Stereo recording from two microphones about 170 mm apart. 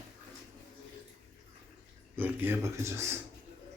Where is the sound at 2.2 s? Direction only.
15° right (ahead or behind).